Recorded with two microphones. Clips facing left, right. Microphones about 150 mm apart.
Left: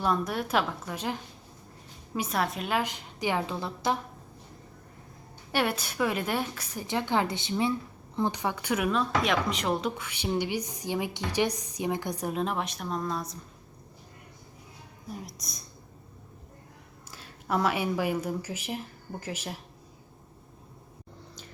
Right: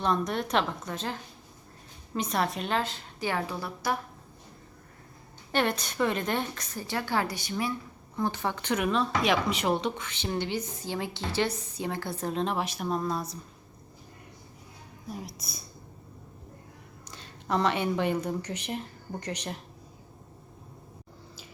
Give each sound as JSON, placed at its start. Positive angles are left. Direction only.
{"t": 0.0, "sound": "a woman's voice", "side_deg": 5}
{"t": 5.5, "sound": "speech", "side_deg": 10}
{"t": 6.8, "sound": "a woman's voice", "side_deg": 20}
{"t": 15.1, "sound": "a woman's voice", "side_deg": 0}
{"t": 17.1, "sound": "speech", "side_deg": 5}